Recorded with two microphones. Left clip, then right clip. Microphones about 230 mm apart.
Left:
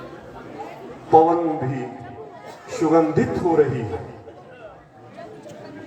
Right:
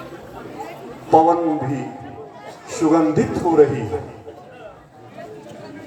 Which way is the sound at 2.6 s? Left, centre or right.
Right.